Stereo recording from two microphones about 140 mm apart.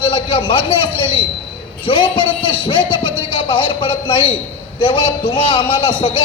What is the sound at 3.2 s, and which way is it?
A man's voice, 40° left (ahead or behind).